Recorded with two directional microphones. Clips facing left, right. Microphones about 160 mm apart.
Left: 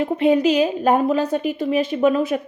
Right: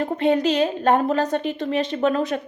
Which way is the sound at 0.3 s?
10° left (ahead or behind).